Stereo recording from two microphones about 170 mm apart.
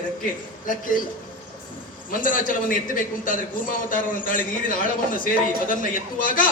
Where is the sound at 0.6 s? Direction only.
50° left (ahead or behind).